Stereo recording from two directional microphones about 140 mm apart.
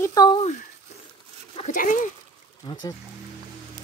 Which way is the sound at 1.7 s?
70° left (ahead or behind).